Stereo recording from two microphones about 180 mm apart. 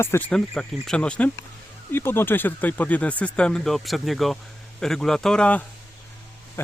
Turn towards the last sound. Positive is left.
turn(degrees=5)  # may be behind; listen again after turning